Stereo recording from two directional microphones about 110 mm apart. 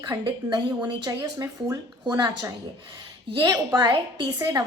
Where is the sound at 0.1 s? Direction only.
35° right (ahead or behind).